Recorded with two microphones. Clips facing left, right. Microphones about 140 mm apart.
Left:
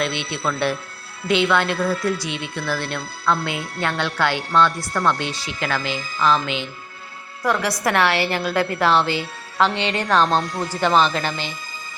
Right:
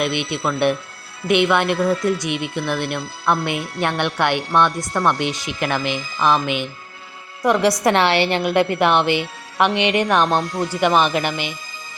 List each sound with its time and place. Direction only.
0.0 s speech: 15° right (ahead or behind)